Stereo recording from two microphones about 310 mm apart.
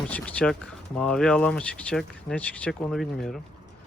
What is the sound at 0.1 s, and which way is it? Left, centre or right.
Speech, centre.